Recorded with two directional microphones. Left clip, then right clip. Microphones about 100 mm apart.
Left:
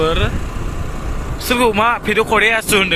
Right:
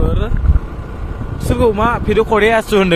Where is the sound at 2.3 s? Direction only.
45° right (ahead or behind).